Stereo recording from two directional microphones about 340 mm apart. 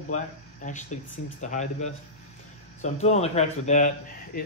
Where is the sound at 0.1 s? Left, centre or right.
Left.